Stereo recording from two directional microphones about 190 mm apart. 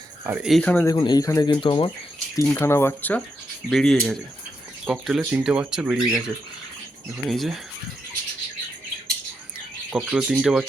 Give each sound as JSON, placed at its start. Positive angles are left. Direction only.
{"t": 0.3, "sound": "speech", "side_deg": -5}
{"t": 0.9, "sound": "speech", "side_deg": 20}
{"t": 2.3, "sound": "speech", "side_deg": 15}
{"t": 9.9, "sound": "speech", "side_deg": -5}